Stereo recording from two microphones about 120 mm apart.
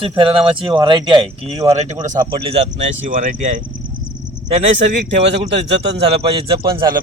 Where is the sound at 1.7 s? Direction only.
70° right (ahead or behind).